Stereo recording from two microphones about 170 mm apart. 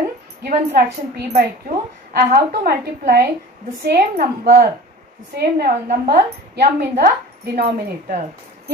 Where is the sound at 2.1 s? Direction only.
60° right (ahead or behind).